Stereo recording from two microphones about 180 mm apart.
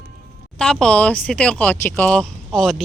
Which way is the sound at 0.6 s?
5° left (ahead or behind).